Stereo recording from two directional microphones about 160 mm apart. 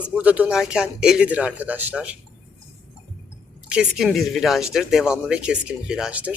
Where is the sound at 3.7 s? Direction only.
5° right (ahead or behind).